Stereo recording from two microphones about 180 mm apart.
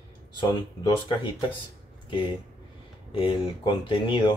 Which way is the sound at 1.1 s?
30° left (ahead or behind).